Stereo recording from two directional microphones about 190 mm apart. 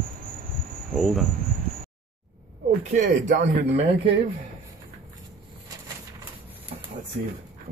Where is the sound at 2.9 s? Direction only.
40° right (ahead or behind).